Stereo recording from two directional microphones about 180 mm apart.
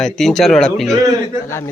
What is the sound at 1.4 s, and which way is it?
Speech, 15° left (ahead or behind).